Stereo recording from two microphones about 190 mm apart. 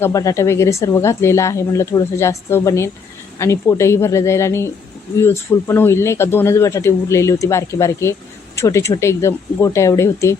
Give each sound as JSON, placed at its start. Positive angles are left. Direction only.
{"t": 0.0, "sound": "speech", "side_deg": 15}